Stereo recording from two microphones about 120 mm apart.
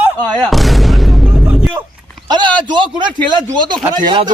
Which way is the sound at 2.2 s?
35° right (ahead or behind).